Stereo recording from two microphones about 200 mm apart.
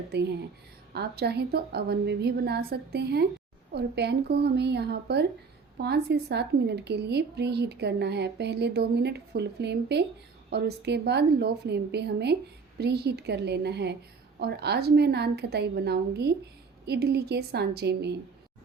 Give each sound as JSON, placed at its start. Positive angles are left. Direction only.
{"t": 0.1, "sound": "a woman's voice", "side_deg": -55}